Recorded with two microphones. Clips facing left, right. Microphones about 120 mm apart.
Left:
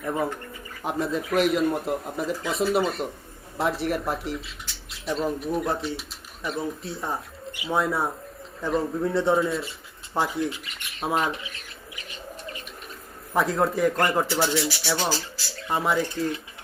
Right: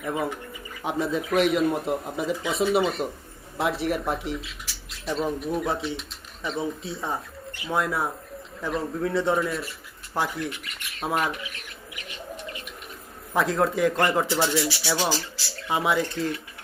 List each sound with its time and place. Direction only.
0.0 s speech: 5° right (ahead or behind)
7.5 s bird: 15° left (ahead or behind)
7.8 s speech: centre (ahead or behind)
11.3 s bird: 30° left (ahead or behind)
13.3 s speech: centre (ahead or behind)